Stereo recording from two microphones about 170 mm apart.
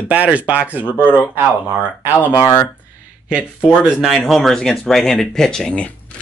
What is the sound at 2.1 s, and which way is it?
Speech, 20° left (ahead or behind).